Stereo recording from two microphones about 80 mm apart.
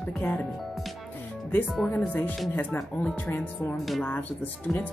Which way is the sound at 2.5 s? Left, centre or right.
Left.